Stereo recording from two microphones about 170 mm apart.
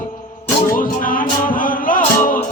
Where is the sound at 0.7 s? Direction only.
55° left (ahead or behind).